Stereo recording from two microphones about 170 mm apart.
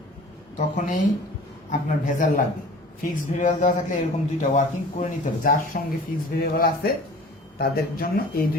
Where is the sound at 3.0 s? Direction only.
50° left (ahead or behind).